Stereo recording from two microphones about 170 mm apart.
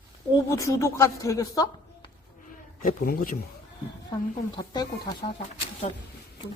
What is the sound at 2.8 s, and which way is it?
Speech, 55° left (ahead or behind).